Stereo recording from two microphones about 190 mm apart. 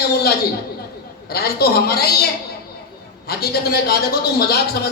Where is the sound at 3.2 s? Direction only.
55° left (ahead or behind).